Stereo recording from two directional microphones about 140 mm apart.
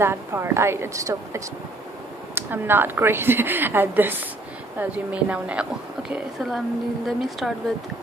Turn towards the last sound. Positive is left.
turn(degrees=0)  # may be behind; listen again after turning